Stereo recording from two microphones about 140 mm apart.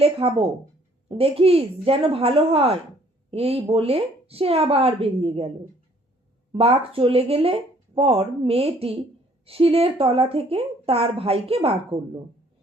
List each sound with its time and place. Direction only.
0.0 s speech: 40° right (ahead or behind)
6.5 s speech: 45° right (ahead or behind)